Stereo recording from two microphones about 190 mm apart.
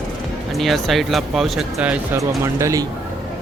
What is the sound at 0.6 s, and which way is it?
Speech, centre (ahead or behind).